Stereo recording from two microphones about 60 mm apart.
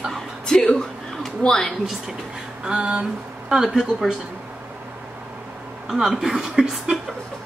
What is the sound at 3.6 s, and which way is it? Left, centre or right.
Speech, centre.